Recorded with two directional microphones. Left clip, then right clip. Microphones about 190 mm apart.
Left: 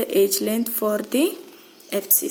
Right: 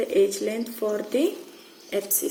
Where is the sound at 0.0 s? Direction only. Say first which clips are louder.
Left 2 dB; 55° left (ahead or behind).